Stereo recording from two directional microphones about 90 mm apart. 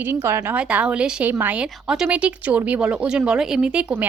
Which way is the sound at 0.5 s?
15° right (ahead or behind).